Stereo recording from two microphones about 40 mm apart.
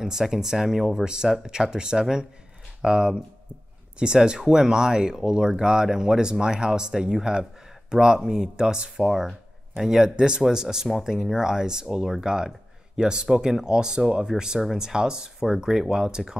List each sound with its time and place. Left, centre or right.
0.0 s speech: centre
9.0 s speech: centre